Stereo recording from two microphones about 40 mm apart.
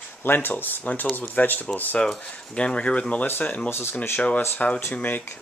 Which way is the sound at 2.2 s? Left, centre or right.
Left.